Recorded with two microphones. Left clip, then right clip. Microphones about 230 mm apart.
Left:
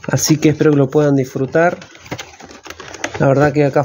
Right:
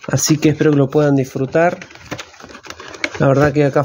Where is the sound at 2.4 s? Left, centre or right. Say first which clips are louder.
Right 1 dB; right.